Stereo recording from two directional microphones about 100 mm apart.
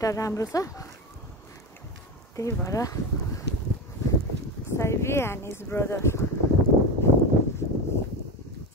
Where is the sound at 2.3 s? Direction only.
30° left (ahead or behind).